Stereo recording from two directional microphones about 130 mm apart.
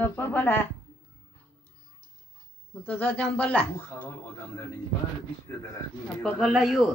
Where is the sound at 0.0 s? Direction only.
15° left (ahead or behind).